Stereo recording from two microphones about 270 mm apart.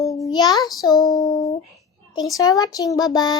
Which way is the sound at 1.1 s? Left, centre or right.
Centre.